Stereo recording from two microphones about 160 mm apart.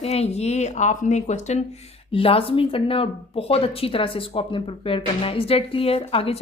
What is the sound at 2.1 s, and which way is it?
Speech, 35° left (ahead or behind).